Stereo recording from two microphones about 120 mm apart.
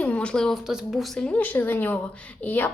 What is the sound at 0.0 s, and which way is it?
A woman's voice, 10° left (ahead or behind).